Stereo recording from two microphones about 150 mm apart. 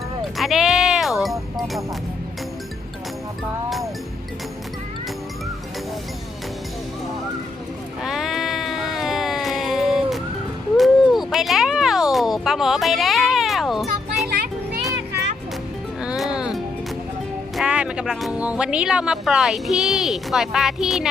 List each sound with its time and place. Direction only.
0.2 s music: centre (ahead or behind)
8.0 s a sound: centre (ahead or behind)
14.3 s children playing: 90° right
16.0 s music: 5° right (ahead or behind)
17.6 s speech: 5° right (ahead or behind)